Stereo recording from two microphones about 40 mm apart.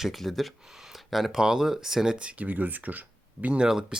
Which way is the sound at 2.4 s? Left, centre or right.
Right.